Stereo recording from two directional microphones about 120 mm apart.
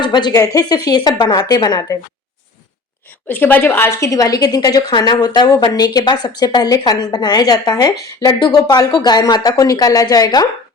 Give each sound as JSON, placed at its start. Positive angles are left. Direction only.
{"t": 0.0, "sound": "a woman's voice", "side_deg": 35}
{"t": 3.2, "sound": "a woman's voice", "side_deg": 15}